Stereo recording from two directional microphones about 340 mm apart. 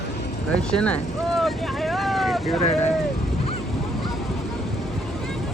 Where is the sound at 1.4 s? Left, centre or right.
Centre.